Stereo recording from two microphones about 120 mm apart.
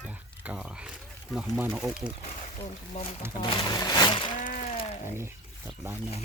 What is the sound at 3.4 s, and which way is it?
Speech, 40° left (ahead or behind).